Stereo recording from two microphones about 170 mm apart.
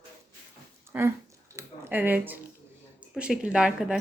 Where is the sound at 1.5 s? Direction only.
15° right (ahead or behind).